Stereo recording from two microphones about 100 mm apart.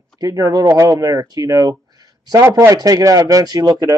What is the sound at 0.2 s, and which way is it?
Speech, 40° right (ahead or behind).